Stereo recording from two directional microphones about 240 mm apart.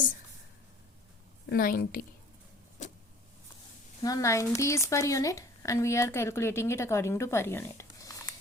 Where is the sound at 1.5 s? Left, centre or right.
Left.